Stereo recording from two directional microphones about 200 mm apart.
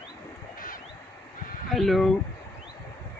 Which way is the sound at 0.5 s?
45° left (ahead or behind).